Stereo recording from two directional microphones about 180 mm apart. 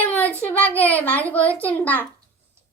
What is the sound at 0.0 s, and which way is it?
Child singing, 10° left (ahead or behind).